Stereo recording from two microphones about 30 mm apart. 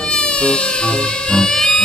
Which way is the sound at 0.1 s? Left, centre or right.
Left.